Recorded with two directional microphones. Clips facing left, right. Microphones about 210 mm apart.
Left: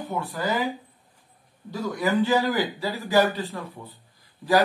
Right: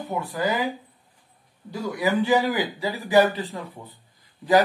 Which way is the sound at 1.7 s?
15° right (ahead or behind).